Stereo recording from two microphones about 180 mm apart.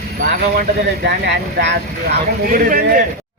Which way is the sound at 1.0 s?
65° right (ahead or behind).